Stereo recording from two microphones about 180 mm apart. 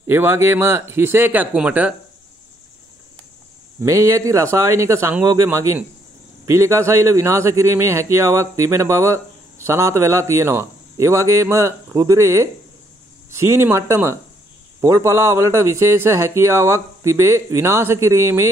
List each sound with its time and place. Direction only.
0.0 s a man's voice: 15° right (ahead or behind)
3.8 s a man's voice: 15° right (ahead or behind)